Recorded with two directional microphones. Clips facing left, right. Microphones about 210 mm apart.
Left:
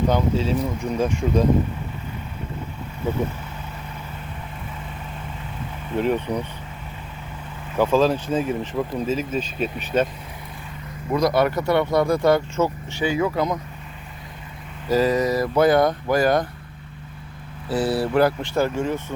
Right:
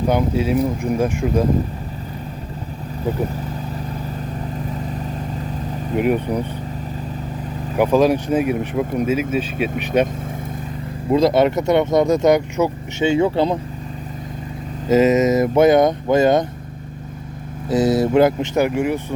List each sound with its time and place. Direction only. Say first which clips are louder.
0.1 s speech: right 3 dB; 10° right (ahead or behind)
4.6 s vehicle: right 9 dB; 40° right (ahead or behind)
6.0 s speech: right 3 dB; 10° right (ahead or behind)
7.8 s speech: right 3 dB; 15° right (ahead or behind)
11.1 s speech: right 5 dB; 25° right (ahead or behind)
13.1 s speech: right 5 dB; 30° right (ahead or behind)
14.8 s speech: right 5 dB; 20° right (ahead or behind)
18.0 s speech: right 5 dB; 20° right (ahead or behind)